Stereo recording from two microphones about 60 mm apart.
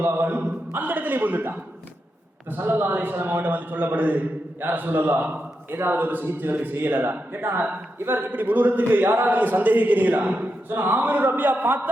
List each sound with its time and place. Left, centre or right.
0.0 s a man's voice: right